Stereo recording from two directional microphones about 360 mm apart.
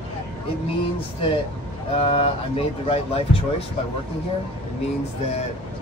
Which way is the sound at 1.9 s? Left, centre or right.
Centre.